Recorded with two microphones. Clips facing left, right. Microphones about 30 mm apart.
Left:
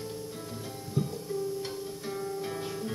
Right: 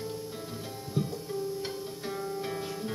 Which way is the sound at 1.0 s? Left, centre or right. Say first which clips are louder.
Left 1 dB; centre.